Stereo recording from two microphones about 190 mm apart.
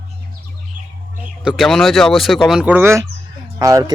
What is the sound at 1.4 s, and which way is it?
Speech, centre (ahead or behind).